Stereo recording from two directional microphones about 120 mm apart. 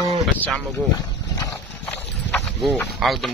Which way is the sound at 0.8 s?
5° right (ahead or behind).